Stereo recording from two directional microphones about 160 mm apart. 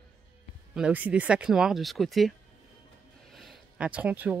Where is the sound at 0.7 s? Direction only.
10° right (ahead or behind).